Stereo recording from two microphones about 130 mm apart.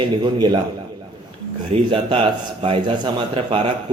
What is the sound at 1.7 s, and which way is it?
A man's voice, 45° right (ahead or behind).